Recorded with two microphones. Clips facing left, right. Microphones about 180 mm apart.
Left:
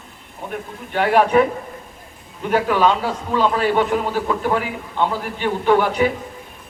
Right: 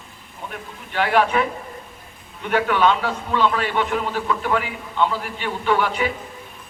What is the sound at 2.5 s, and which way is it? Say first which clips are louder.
A man's voice: left 2 dB; 35° left (ahead or behind).